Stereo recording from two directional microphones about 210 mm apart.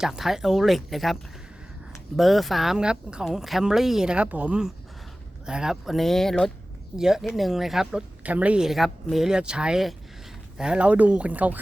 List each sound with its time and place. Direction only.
0.0 s a woman's voice: centre (ahead or behind)